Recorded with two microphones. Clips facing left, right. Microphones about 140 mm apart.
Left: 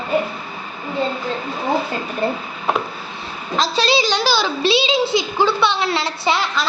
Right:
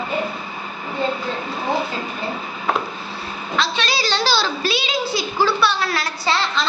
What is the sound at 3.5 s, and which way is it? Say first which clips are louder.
Speech: left 4 dB; 35° left (ahead or behind).